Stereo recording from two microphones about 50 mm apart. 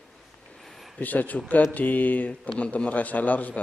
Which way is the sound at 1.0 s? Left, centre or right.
Left.